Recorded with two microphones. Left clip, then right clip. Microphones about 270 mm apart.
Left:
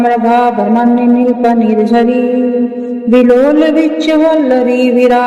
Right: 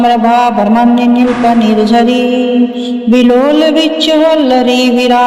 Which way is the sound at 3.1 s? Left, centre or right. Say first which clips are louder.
Left 1 dB; right.